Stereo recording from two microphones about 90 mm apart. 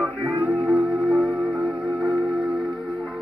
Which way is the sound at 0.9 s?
10° right (ahead or behind).